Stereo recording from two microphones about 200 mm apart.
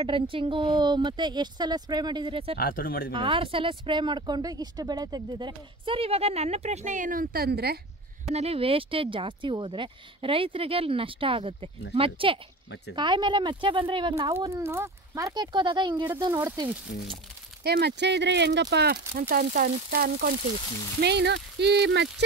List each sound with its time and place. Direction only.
0.0 s speech: 25° right (ahead or behind)
2.5 s speech: 45° left (ahead or behind)
3.1 s speech: 25° right (ahead or behind); by 7.8 s 50° right (ahead or behind)
8.3 s speech: 30° right (ahead or behind)
12.6 s speech: 60° left (ahead or behind)
12.9 s speech: 25° right (ahead or behind)
14.3 s speech: 10° right (ahead or behind)
17.6 s speech: 55° right (ahead or behind)
21.0 s speech: 60° right (ahead or behind)